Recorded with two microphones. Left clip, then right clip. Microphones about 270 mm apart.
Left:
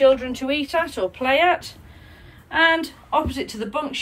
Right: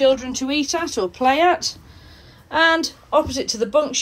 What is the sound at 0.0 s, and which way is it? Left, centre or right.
Speech, centre.